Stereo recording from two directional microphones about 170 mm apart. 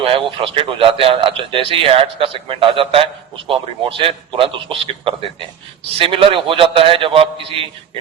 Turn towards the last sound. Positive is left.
turn(degrees=-35)  # may be behind; listen again after turning